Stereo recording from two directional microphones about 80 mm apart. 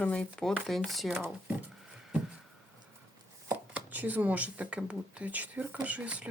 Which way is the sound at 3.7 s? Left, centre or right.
Right.